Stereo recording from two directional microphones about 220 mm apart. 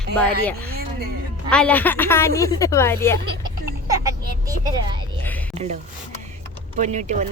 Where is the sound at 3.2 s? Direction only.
20° right (ahead or behind).